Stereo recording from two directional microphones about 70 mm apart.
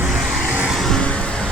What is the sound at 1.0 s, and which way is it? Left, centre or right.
Vehicle, centre.